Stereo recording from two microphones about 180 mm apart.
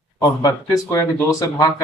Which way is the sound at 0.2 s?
20° left (ahead or behind).